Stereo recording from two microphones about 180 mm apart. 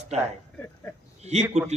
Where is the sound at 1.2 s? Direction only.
35° right (ahead or behind).